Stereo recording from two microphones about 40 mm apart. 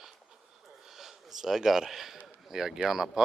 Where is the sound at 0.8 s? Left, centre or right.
Centre.